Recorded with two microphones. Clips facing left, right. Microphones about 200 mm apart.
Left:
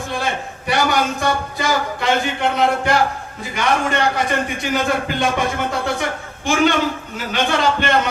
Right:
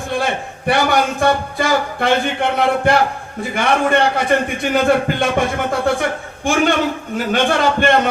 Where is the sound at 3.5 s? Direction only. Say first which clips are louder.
Right 3 dB; 55° right (ahead or behind).